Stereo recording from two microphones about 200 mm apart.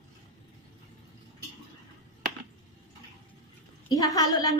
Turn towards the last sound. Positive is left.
turn(degrees=20)  # may be behind; listen again after turning